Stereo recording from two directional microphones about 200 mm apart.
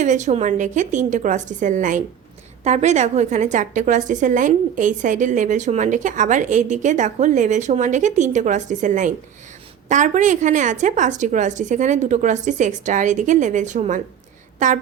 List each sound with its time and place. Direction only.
0.0 s a woman's voice: 35° right (ahead or behind)